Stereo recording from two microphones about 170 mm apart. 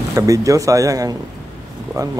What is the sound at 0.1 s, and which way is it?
Speech, 20° right (ahead or behind).